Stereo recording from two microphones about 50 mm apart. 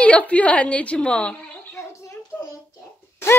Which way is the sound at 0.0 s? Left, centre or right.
Left.